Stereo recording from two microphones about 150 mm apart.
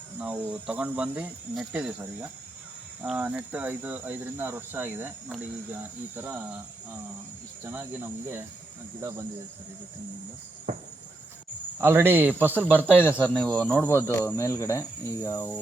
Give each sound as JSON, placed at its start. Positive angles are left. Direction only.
{"t": 0.2, "sound": "speech", "side_deg": -10}
{"t": 7.6, "sound": "speech", "side_deg": -15}
{"t": 9.0, "sound": "cricket", "side_deg": -20}
{"t": 11.8, "sound": "speech", "side_deg": -15}
{"t": 12.9, "sound": "speech", "side_deg": 15}